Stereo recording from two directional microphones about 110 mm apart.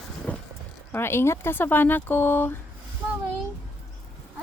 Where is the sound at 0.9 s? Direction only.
20° left (ahead or behind).